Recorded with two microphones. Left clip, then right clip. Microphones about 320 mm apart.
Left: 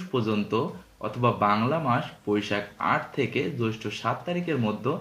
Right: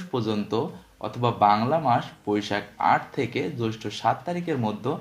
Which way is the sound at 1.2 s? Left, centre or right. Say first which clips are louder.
Right 3 dB; centre.